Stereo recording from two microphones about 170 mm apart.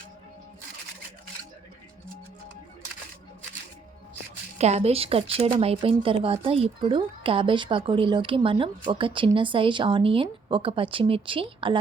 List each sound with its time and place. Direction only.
4.5 s a woman's voice: 40° right (ahead or behind)